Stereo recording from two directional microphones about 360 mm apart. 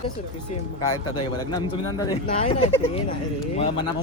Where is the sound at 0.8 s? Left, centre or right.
Centre.